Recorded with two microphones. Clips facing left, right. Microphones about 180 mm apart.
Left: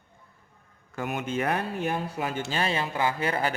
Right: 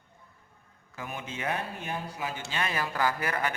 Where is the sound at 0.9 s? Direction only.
70° left (ahead or behind).